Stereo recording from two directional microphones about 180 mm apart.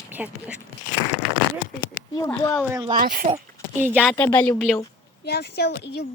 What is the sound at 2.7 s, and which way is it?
Speech, 25° right (ahead or behind).